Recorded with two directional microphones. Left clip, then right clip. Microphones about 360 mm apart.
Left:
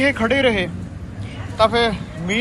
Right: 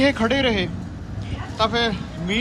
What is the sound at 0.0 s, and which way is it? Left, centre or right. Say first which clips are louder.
A man's voice: left 2 dB; centre.